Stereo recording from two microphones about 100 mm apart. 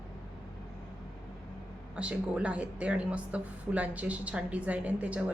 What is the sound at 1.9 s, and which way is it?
Speech, 10° right (ahead or behind).